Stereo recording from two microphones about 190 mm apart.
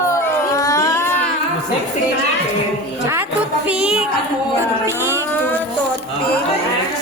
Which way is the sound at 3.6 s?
5° right (ahead or behind).